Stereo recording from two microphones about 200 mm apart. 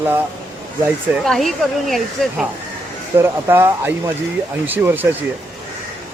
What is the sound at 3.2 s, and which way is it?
Speech, 10° right (ahead or behind).